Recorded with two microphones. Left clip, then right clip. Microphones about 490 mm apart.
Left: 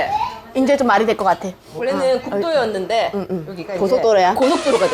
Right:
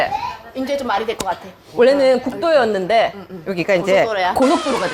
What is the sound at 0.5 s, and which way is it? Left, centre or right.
Speech, left.